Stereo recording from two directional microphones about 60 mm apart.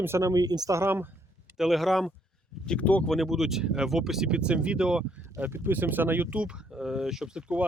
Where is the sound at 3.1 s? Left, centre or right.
Centre.